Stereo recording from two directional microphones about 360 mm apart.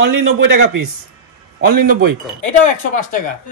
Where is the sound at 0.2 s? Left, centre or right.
Right.